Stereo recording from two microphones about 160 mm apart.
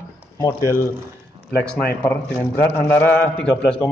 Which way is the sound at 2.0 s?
15° left (ahead or behind).